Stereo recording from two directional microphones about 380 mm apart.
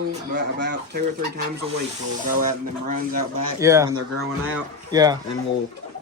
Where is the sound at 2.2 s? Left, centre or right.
Right.